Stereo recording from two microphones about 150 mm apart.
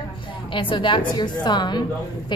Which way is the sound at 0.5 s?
35° left (ahead or behind).